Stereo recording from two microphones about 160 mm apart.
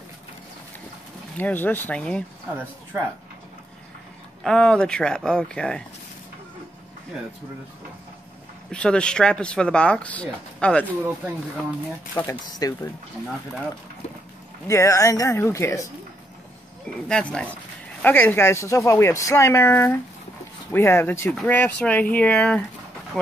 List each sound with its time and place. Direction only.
1.4 s speech: 10° left (ahead or behind)
4.4 s speech: 5° left (ahead or behind)
8.7 s speech: 5° left (ahead or behind)
12.2 s speech: 25° left (ahead or behind)
14.7 s speech: 20° left (ahead or behind)
17.1 s speech: 5° left (ahead or behind)